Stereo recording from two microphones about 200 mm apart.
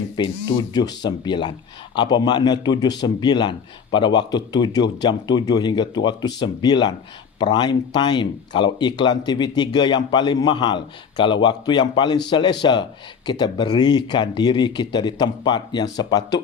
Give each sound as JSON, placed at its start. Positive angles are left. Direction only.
{"t": 0.2, "sound": "speech", "side_deg": 20}